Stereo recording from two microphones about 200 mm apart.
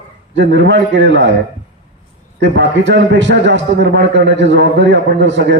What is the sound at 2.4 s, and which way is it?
A man's voice, 60° right (ahead or behind).